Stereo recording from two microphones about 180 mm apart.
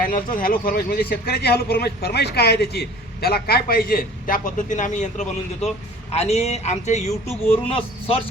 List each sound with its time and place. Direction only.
0.0 s a man's voice: 50° left (ahead or behind)
7.3 s speech: 10° left (ahead or behind)
7.7 s speech: 30° left (ahead or behind)